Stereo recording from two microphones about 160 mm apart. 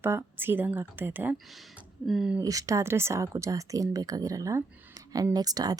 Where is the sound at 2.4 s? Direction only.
20° right (ahead or behind).